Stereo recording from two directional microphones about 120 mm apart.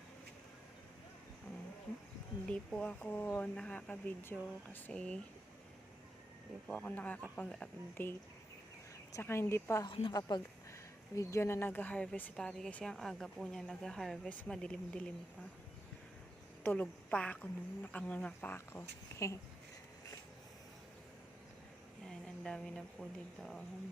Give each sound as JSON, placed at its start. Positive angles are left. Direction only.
{"t": 2.5, "sound": "speech", "side_deg": 10}
{"t": 6.7, "sound": "speech", "side_deg": 10}
{"t": 9.1, "sound": "a woman's voice", "side_deg": 20}
{"t": 9.8, "sound": "a woman's voice", "side_deg": 45}
{"t": 16.6, "sound": "speech", "side_deg": 10}
{"t": 22.0, "sound": "speech", "side_deg": 5}